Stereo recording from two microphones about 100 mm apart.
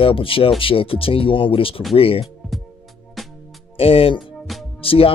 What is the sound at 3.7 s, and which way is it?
Speech, 65° left (ahead or behind).